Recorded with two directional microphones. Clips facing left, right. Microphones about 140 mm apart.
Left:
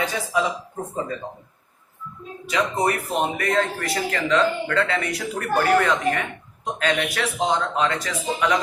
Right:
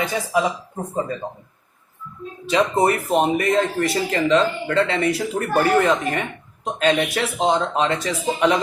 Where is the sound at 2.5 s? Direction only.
25° right (ahead or behind).